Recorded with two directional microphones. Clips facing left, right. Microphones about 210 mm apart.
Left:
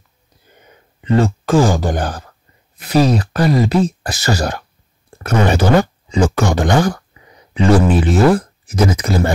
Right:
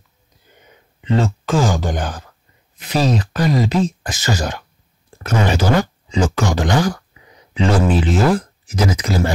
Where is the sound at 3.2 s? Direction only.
35° left (ahead or behind).